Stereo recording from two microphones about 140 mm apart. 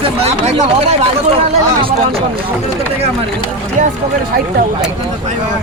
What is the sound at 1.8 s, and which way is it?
Speech, 40° right (ahead or behind).